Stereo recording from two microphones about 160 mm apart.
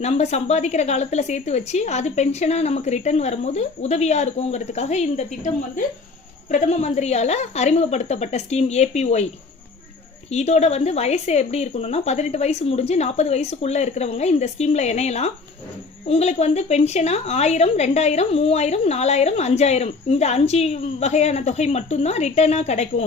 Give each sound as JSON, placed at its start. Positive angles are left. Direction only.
{"t": 0.0, "sound": "a woman's voice", "side_deg": 45}
{"t": 10.3, "sound": "a woman's voice", "side_deg": 45}